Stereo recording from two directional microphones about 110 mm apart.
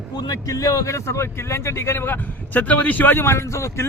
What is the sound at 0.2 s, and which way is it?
Speech, 35° left (ahead or behind).